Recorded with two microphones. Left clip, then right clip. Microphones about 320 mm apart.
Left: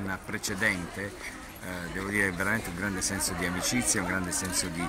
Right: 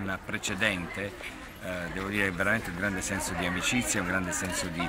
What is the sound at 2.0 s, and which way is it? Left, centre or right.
Speech, centre.